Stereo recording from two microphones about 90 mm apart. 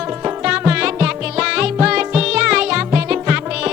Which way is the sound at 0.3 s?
15° right (ahead or behind).